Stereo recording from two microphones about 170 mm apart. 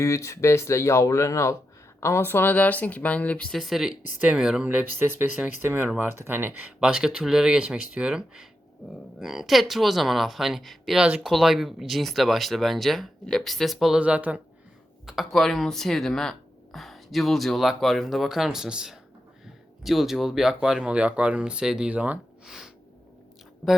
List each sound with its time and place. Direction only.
0.0 s speech: 15° left (ahead or behind); by 22.7 s centre (ahead or behind)